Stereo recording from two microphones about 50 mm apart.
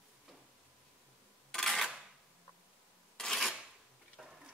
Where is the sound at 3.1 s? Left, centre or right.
Centre.